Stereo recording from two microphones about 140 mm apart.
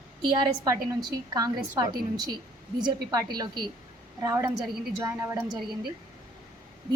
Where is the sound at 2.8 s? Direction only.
30° right (ahead or behind).